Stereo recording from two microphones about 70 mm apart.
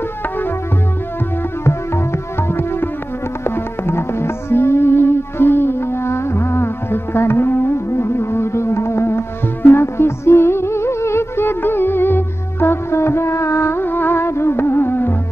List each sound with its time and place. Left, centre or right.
3.4 s music: left